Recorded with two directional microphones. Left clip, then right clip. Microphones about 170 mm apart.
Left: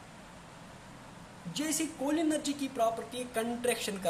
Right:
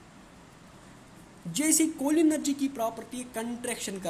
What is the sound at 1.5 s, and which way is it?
A woman's voice, 50° right (ahead or behind).